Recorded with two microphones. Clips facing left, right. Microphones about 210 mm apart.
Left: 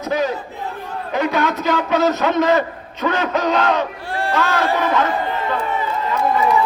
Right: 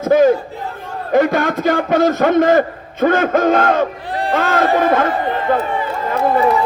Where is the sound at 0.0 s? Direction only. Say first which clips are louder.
Right 9 dB; 50° right (ahead or behind).